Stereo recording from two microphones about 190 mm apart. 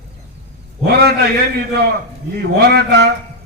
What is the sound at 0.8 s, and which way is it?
Speech, 60° right (ahead or behind).